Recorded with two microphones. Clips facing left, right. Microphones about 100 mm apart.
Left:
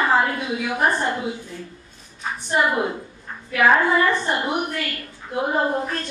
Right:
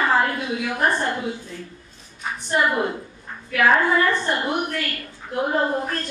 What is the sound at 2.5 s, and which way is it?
A woman's voice, 10° left (ahead or behind).